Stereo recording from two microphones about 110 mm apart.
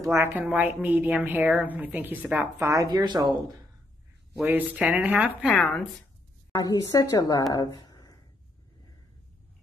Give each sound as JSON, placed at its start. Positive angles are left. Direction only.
{"t": 0.0, "sound": "a woman's voice", "side_deg": -20}
{"t": 2.6, "sound": "speech", "side_deg": -30}
{"t": 2.9, "sound": "speech", "side_deg": -40}
{"t": 4.4, "sound": "a woman's voice", "side_deg": -15}
{"t": 6.6, "sound": "a woman's voice", "side_deg": 35}
{"t": 7.5, "sound": "a sound", "side_deg": 40}